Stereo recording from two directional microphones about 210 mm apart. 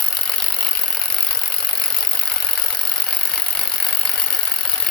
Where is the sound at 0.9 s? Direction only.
5° left (ahead or behind).